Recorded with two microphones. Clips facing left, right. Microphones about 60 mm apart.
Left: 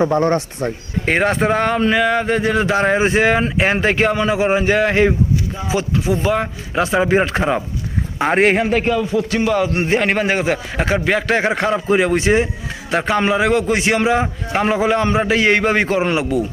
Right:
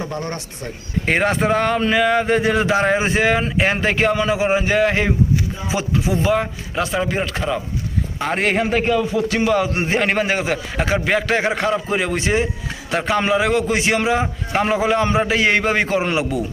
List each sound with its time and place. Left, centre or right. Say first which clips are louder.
0.0 s speech: left 11 dB; left
1.0 s speech: left 2 dB; centre
5.6 s speech: left 4 dB; centre
6.1 s a man's voice: even; centre
7.0 s speech: left 6 dB; left
8.6 s speech: left 1 dB; centre